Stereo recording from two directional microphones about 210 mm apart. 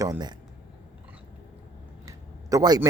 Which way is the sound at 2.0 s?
15° right (ahead or behind).